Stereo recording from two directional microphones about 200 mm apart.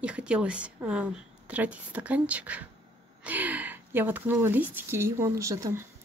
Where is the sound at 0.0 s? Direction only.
5° right (ahead or behind).